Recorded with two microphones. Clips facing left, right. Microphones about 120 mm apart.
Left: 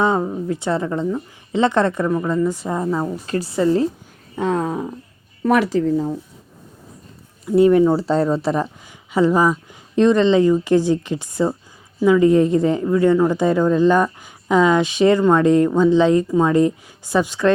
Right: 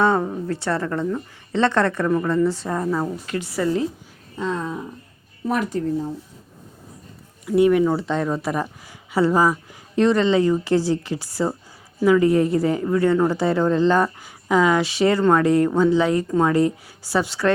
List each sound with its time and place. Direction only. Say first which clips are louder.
0.0 s a woman's voice: left 1 dB; 15° left (ahead or behind)
3.2 s speech: left 5 dB; 35° left (ahead or behind)
4.4 s a sound: left 5 dB; 55° left (ahead or behind)
5.4 s speech: left 6 dB; 80° left
7.4 s speech: left 3 dB; 30° left (ahead or behind)
9.1 s a woman's voice: left 2 dB; 15° left (ahead or behind)